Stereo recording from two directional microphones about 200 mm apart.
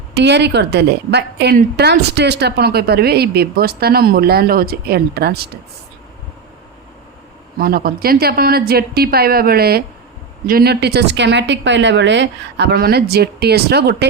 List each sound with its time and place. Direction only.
0.1 s a woman's voice: 60° right (ahead or behind)
7.6 s a woman's voice: 45° right (ahead or behind)